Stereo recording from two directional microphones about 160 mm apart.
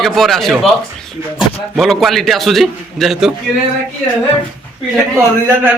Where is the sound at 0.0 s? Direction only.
Centre (ahead or behind).